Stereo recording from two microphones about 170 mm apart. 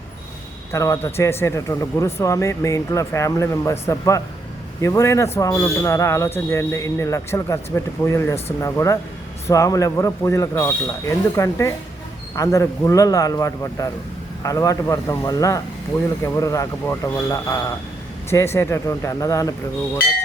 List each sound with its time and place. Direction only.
0.7 s speech: 20° left (ahead or behind)